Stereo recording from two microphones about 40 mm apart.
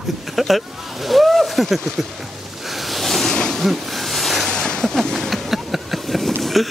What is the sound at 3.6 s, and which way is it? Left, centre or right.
Snake, centre.